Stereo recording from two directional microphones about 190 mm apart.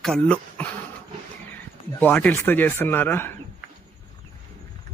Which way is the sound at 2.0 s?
10° left (ahead or behind).